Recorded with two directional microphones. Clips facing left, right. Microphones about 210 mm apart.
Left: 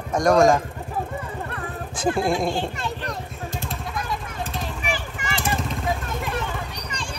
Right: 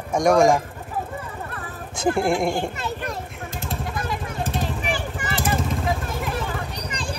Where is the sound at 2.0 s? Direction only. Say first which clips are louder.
Right 1 dB; 20° left (ahead or behind).